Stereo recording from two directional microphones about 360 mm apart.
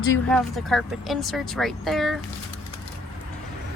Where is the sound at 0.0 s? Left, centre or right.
Centre.